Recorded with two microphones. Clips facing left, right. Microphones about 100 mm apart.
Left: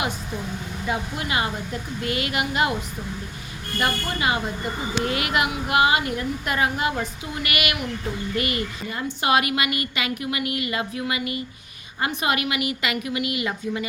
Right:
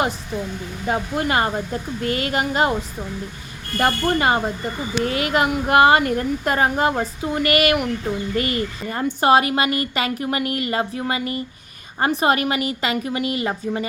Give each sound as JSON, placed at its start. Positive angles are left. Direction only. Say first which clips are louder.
{"t": 0.9, "sound": "a woman's voice", "louder": "right 6 dB", "side_deg": -45}
{"t": 3.8, "sound": "a woman's voice", "louder": "right 6 dB", "side_deg": -45}